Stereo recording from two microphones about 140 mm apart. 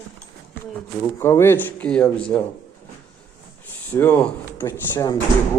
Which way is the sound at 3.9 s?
15° left (ahead or behind).